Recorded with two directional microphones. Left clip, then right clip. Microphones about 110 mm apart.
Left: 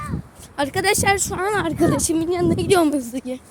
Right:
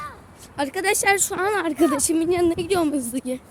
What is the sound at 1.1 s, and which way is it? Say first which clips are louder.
A woman's voice: even; 15° right (ahead or behind).